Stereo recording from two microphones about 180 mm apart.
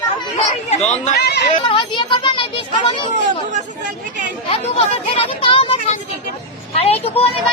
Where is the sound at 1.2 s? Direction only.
65° left (ahead or behind).